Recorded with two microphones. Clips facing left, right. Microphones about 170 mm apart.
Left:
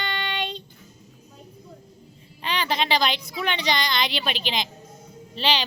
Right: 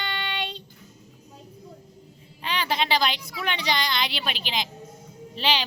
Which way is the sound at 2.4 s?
5° right (ahead or behind).